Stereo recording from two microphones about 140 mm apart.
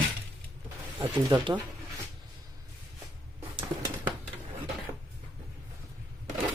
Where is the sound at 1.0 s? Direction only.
35° right (ahead or behind).